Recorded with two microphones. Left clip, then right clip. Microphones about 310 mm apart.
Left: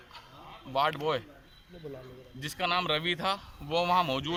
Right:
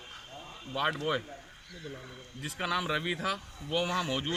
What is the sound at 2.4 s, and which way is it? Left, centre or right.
A man's voice, centre.